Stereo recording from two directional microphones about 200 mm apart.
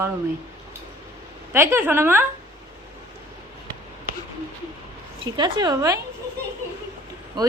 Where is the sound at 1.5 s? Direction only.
10° right (ahead or behind).